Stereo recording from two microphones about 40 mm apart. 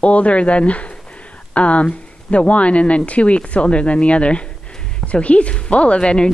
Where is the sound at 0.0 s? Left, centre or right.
Left.